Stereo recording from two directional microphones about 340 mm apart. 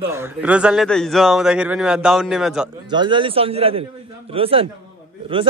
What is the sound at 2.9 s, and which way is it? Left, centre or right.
Speech, centre.